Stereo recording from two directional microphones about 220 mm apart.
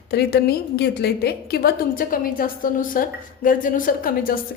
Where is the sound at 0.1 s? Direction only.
45° left (ahead or behind).